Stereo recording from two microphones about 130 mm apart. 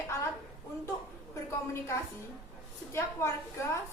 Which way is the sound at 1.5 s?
20° left (ahead or behind).